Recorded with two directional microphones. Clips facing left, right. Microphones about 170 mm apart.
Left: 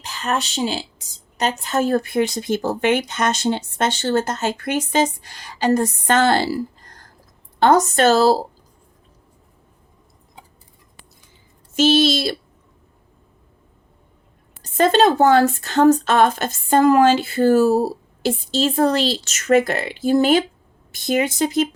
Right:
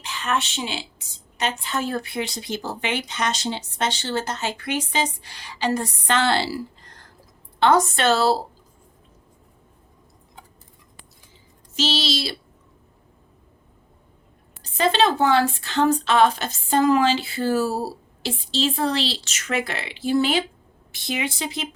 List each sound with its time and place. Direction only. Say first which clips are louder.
0.0 s a woman's voice: left 2 dB; 40° left (ahead or behind)
11.7 s a woman's voice: left 9 dB; 50° left (ahead or behind)
14.6 s a woman's voice: left 5 dB; 45° left (ahead or behind)